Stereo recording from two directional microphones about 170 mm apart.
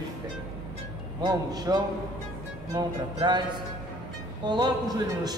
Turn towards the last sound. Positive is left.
turn(degrees=-25)  # may be behind; listen again after turning